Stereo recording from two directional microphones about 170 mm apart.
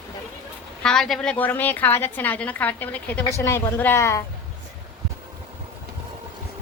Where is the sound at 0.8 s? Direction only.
5° left (ahead or behind).